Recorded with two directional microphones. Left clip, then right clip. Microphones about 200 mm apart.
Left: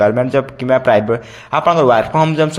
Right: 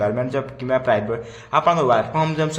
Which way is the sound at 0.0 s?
35° left (ahead or behind).